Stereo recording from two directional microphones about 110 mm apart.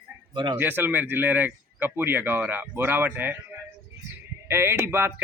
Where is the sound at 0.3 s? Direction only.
45° right (ahead or behind).